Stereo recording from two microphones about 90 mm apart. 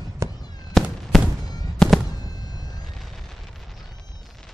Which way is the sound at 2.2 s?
50° left (ahead or behind).